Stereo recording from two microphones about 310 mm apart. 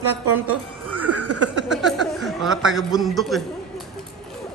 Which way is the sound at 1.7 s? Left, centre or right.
Centre.